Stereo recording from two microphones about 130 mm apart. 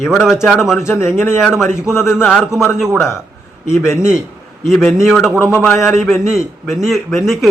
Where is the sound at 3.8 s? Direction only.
20° left (ahead or behind).